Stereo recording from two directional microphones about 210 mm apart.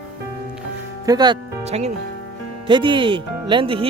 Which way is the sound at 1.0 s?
20° right (ahead or behind).